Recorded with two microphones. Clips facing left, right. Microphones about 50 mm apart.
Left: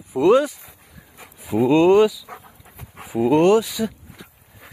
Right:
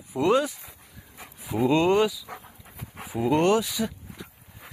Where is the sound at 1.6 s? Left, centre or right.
Centre.